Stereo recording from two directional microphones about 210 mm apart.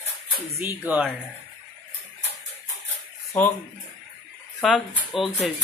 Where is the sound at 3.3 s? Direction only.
5° left (ahead or behind).